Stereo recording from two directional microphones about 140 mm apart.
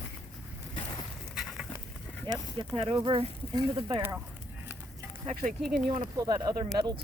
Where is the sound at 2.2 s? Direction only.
35° right (ahead or behind).